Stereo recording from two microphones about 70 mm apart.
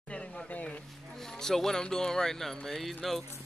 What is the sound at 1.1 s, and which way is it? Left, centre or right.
Speech, centre.